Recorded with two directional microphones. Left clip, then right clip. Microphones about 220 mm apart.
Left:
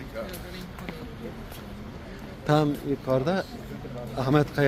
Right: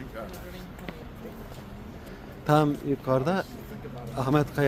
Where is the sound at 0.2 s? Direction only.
45° right (ahead or behind).